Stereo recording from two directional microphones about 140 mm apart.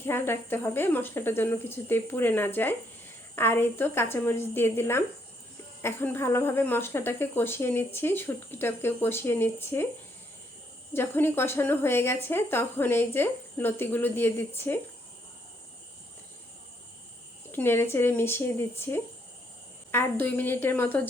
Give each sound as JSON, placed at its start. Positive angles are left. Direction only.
{"t": 0.0, "sound": "speech", "side_deg": 15}
{"t": 10.9, "sound": "speech", "side_deg": 15}
{"t": 17.5, "sound": "speech", "side_deg": 15}